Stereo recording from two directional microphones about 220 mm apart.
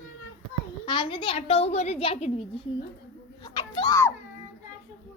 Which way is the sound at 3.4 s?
20° left (ahead or behind).